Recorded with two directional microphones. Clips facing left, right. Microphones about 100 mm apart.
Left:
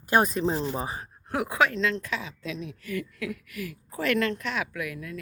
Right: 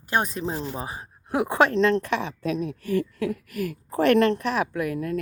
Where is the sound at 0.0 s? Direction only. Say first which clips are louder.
Left 3 dB; 5° left (ahead or behind).